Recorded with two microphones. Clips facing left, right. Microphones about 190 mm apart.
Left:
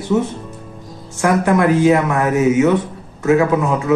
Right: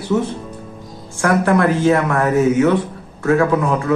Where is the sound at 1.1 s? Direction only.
15° left (ahead or behind).